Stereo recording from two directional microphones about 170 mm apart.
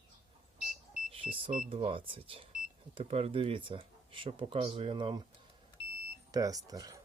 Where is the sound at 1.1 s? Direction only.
30° right (ahead or behind).